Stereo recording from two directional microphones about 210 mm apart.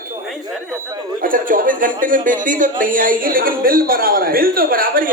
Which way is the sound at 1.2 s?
40° right (ahead or behind).